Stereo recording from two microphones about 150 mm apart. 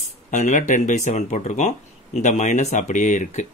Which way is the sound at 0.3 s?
55° left (ahead or behind).